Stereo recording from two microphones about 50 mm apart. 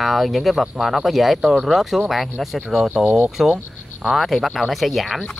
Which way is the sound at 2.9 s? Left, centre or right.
Right.